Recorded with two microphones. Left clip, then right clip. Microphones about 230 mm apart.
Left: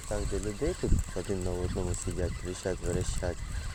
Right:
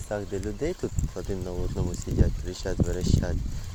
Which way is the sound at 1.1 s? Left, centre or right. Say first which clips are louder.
Even; centre.